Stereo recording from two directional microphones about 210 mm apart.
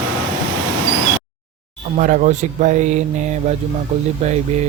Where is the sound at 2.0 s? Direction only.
35° right (ahead or behind).